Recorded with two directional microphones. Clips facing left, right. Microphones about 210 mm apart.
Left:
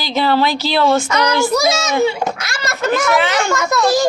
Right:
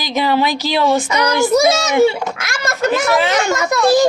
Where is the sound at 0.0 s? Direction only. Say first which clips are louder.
Left 1 dB; 15° right (ahead or behind).